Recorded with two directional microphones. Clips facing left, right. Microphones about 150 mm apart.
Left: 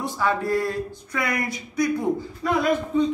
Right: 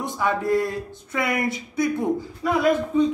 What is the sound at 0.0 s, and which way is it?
Speech, 20° right (ahead or behind).